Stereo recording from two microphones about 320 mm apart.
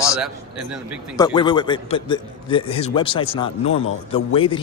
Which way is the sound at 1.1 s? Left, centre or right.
Centre.